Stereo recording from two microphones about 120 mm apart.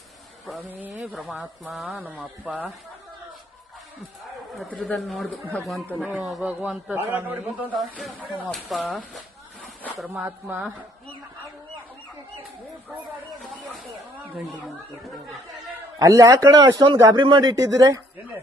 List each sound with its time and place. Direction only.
0.7 s a man's voice: 15° right (ahead or behind)
1.0 s a man's voice: centre (ahead or behind)
4.8 s a man's voice: centre (ahead or behind)
7.8 s speech: centre (ahead or behind)
13.4 s a sound: centre (ahead or behind)
16.0 s a man's voice: 30° right (ahead or behind)